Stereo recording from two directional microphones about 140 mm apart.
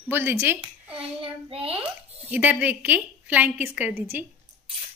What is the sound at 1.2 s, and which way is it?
Speech, 40° right (ahead or behind).